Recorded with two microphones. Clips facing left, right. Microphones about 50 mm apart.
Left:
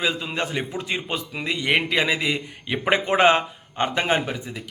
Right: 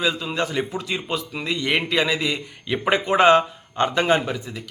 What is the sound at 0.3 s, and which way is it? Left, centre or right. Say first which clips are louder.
A man's voice: right 2 dB; left.